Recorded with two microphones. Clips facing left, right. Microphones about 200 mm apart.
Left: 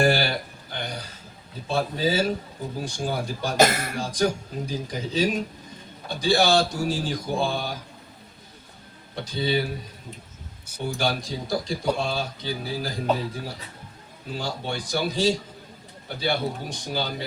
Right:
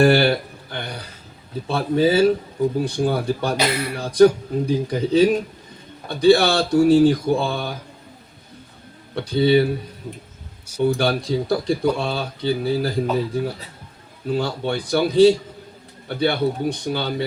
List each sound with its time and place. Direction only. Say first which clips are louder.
0.0 s a sound: right 7 dB; 60° right (ahead or behind)
1.6 s speech: right 6 dB; 60° right (ahead or behind)
3.6 s speech: left 2 dB; 45° left (ahead or behind)
4.0 s speech: right 12 dB; 60° right (ahead or behind)
9.1 s speech: right 9 dB; 60° right (ahead or behind)
10.8 s speech: right 7 dB; 60° right (ahead or behind)
14.3 s speech: right 8 dB; 60° right (ahead or behind)